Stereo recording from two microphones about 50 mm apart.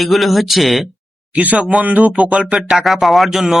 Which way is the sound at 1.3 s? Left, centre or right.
Right.